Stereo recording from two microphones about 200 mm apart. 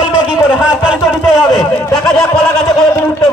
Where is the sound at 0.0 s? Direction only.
5° right (ahead or behind).